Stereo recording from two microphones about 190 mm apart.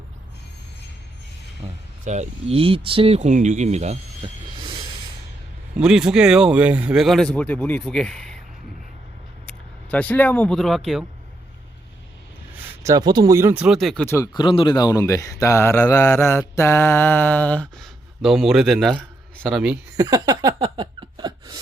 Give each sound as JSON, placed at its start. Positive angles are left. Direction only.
{"t": 1.6, "sound": "speech", "side_deg": -25}
{"t": 2.0, "sound": "speech", "side_deg": -35}
{"t": 5.7, "sound": "a man's voice", "side_deg": -5}
{"t": 9.5, "sound": "speech", "side_deg": 10}
{"t": 12.8, "sound": "speech", "side_deg": -20}
{"t": 20.0, "sound": "a sound", "side_deg": -20}